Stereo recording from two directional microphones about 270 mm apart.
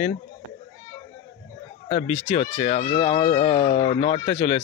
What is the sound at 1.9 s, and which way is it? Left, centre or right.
A man's voice, left.